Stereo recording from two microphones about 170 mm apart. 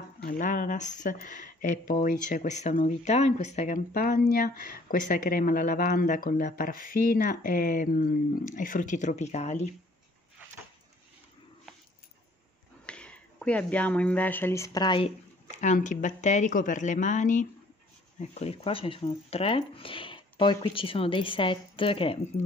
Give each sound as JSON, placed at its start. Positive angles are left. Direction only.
{"t": 0.2, "sound": "speech", "side_deg": 50}
{"t": 12.8, "sound": "speech", "side_deg": 5}
{"t": 15.6, "sound": "speech", "side_deg": 45}
{"t": 18.3, "sound": "speech", "side_deg": 35}